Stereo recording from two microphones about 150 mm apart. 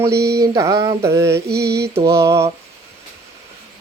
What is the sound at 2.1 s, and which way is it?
Mantra, 20° right (ahead or behind).